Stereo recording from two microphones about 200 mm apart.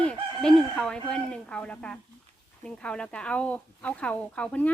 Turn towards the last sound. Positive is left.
turn(degrees=5)  # may be behind; listen again after turning